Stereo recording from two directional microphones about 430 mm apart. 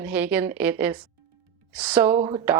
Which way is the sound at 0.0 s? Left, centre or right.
Centre.